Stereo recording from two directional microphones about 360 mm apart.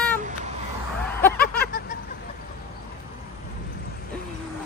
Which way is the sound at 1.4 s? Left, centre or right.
Left.